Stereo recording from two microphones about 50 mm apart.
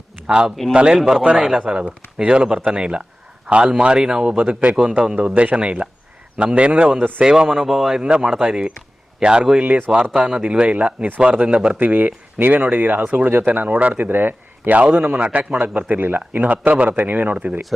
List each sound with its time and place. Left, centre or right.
0.3 s speech: centre
1.4 s speech: centre
2.1 s speech: centre
5.3 s speech: right
7.2 s speech: centre
7.9 s speech: centre
11.8 s speech: right
14.0 s a man's voice: right
16.5 s speech: right